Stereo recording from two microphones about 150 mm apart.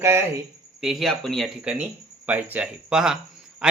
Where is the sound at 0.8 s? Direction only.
Centre (ahead or behind).